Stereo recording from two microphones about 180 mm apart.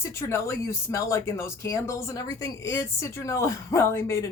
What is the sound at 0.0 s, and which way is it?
Speech, 15° left (ahead or behind).